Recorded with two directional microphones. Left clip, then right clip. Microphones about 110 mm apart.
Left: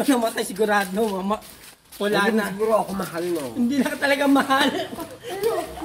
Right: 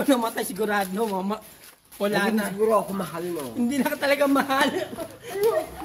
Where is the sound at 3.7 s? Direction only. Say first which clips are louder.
Even; 50° right (ahead or behind).